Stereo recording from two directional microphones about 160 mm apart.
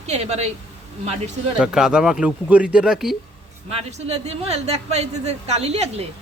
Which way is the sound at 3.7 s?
45° right (ahead or behind).